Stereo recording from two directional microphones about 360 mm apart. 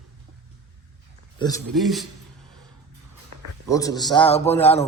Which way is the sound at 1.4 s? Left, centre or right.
Centre.